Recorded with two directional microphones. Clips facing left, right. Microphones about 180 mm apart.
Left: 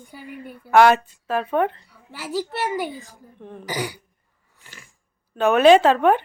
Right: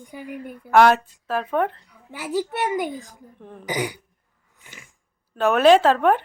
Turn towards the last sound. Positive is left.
turn(degrees=0)  # may be behind; listen again after turning